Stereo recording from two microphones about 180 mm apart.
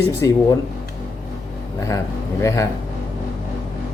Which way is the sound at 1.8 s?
15° left (ahead or behind).